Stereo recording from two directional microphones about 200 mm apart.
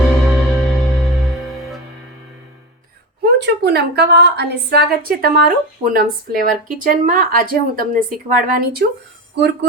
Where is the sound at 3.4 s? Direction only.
55° right (ahead or behind).